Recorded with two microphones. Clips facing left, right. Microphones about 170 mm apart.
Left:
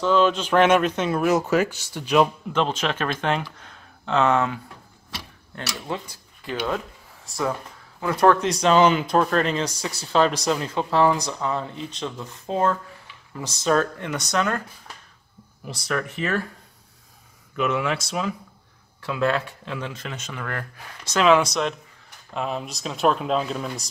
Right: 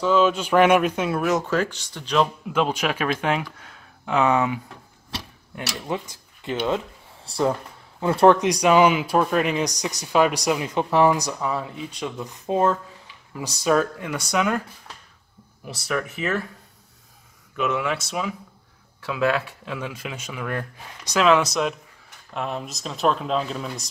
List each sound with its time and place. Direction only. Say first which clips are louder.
0.0 s speech: even; 5° right (ahead or behind); by 2.2 s 10° left (ahead or behind)
2.5 s speech: right 1 dB; 10° right (ahead or behind)
5.9 s speech: right 4 dB; 20° right (ahead or behind)
8.4 s speech: right 1 dB; 15° right (ahead or behind)
15.6 s speech: even; 5° right (ahead or behind)
17.6 s speech: left 1 dB; centre (ahead or behind)
21.1 s speech: even; centre (ahead or behind)